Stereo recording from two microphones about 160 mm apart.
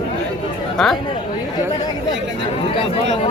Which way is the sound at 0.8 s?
5° left (ahead or behind).